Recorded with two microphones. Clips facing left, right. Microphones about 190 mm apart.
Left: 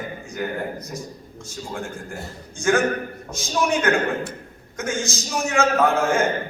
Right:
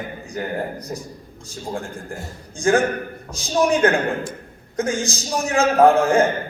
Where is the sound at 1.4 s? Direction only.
35° right (ahead or behind).